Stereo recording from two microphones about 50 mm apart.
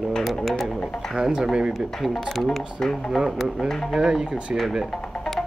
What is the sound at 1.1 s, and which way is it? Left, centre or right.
Speech, centre.